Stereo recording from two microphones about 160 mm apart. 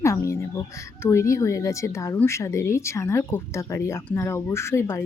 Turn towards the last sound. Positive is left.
turn(degrees=15)  # may be behind; listen again after turning